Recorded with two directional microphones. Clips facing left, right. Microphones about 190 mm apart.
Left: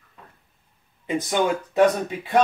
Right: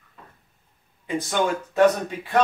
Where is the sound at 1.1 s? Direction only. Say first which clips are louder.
Left 2 dB; 15° left (ahead or behind).